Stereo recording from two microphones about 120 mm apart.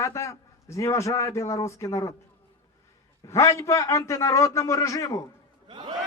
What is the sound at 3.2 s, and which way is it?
A man's voice, 25° left (ahead or behind).